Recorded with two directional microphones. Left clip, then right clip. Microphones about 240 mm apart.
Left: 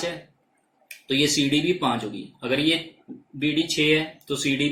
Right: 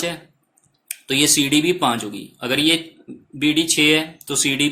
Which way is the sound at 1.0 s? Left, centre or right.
Right.